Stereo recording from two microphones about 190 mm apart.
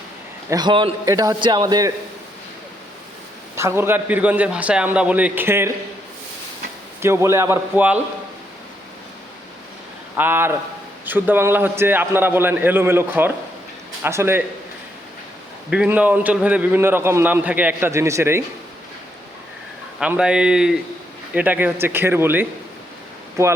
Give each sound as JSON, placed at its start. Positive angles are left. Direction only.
{"t": 0.5, "sound": "a man's voice", "side_deg": -25}
{"t": 3.5, "sound": "a man's voice", "side_deg": -15}
{"t": 7.0, "sound": "a man's voice", "side_deg": -15}
{"t": 10.2, "sound": "a man's voice", "side_deg": -10}
{"t": 15.7, "sound": "a man's voice", "side_deg": -5}
{"t": 20.0, "sound": "a man's voice", "side_deg": -5}